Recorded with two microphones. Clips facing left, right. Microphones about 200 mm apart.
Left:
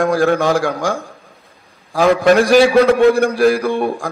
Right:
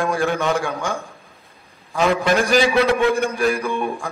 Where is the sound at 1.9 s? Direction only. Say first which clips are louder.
Left 5 dB; 55° left (ahead or behind).